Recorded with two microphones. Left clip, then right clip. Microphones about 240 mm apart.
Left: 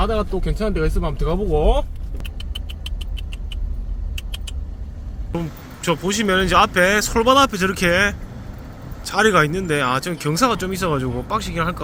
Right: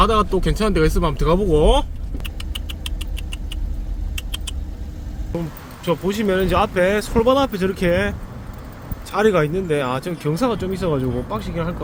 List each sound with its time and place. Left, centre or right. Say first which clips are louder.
0.0 s speech: right 5 dB; right
2.2 s rodents: right 2 dB; centre
4.1 s vehicle: right 3 dB; centre
5.8 s speech: even; centre